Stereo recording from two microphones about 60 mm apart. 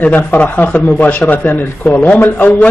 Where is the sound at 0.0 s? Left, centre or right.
Left.